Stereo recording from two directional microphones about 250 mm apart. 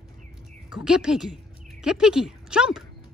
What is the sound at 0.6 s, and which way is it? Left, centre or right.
Speech, centre.